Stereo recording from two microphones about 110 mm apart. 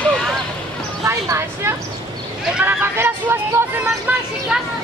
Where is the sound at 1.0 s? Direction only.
25° right (ahead or behind).